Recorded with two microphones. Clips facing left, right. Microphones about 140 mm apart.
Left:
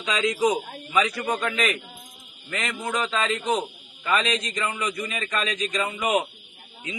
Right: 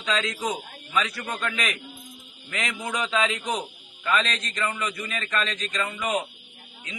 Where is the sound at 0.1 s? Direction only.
15° left (ahead or behind).